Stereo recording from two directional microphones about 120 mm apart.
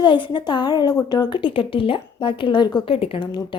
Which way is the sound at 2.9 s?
50° left (ahead or behind).